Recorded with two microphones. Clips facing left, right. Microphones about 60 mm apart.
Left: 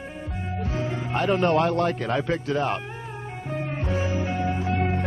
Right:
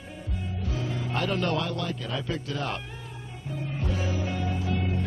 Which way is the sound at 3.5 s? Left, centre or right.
Left.